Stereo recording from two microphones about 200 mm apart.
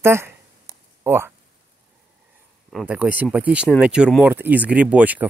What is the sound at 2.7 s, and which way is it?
Speech, 5° right (ahead or behind).